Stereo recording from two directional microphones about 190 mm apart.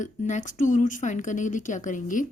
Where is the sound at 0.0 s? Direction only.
40° left (ahead or behind).